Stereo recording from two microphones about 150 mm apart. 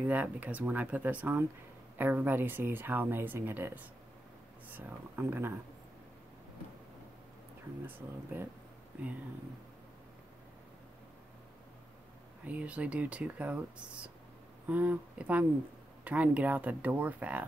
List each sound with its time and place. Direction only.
0.0 s speech: 10° right (ahead or behind)
7.8 s speech: 15° right (ahead or behind)
12.4 s speech: 10° right (ahead or behind)